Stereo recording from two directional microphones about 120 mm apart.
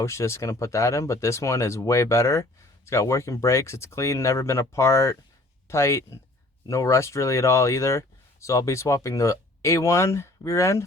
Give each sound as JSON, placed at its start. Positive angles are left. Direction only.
{"t": 0.0, "sound": "speech", "side_deg": 25}